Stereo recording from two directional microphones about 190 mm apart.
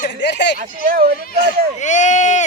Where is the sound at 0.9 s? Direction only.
50° right (ahead or behind).